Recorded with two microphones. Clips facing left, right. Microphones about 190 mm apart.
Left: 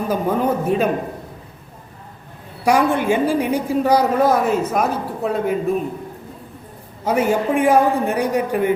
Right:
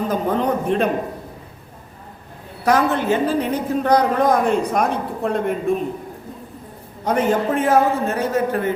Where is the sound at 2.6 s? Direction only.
10° left (ahead or behind).